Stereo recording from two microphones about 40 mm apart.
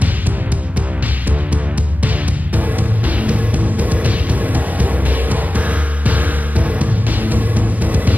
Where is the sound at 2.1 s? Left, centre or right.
Right.